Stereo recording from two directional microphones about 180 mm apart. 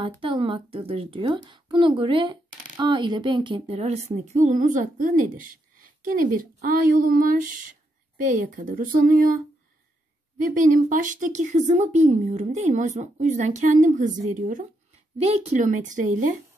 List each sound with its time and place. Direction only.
0.0 s a woman's voice: 30° right (ahead or behind); by 9.4 s 45° right (ahead or behind)
10.4 s a woman's voice: 45° right (ahead or behind)